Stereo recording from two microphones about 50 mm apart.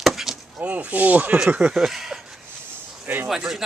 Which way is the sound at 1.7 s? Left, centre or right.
Centre.